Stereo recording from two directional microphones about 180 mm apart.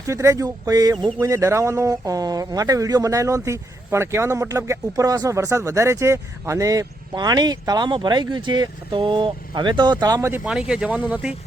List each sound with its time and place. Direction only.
0.1 s speech: 15° right (ahead or behind)
10.4 s speech: 5° right (ahead or behind)